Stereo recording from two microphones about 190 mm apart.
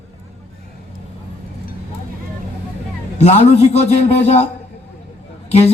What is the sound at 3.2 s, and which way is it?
A man's voice, 35° left (ahead or behind).